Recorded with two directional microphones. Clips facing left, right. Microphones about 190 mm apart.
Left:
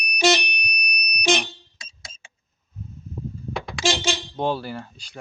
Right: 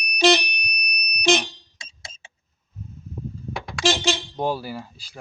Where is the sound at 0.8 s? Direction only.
10° left (ahead or behind).